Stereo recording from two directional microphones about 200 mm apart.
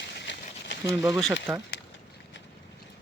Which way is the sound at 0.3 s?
65° left (ahead or behind).